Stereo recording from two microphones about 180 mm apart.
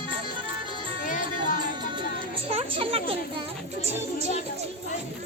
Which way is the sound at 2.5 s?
30° right (ahead or behind).